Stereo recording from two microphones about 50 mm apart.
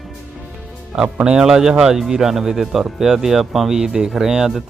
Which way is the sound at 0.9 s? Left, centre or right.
Centre.